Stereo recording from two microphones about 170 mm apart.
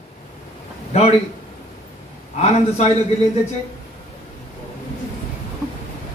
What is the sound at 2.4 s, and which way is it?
Speech, 40° left (ahead or behind).